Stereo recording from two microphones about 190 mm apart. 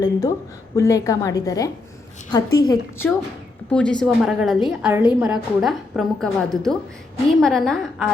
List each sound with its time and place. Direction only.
0.0 s a woman's voice: 20° left (ahead or behind)
3.7 s a woman's voice: 5° left (ahead or behind)